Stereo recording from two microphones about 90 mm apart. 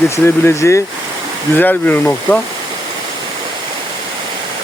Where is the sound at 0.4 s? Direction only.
35° left (ahead or behind).